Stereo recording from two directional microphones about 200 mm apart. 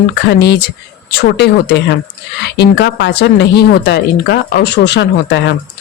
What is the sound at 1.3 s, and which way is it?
Speech, 55° left (ahead or behind).